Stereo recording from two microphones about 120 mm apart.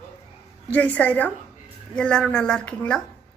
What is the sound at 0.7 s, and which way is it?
A woman's voice, 10° left (ahead or behind).